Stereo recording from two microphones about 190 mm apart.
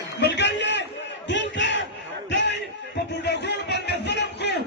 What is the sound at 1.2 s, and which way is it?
Battle cry, 70° left (ahead or behind).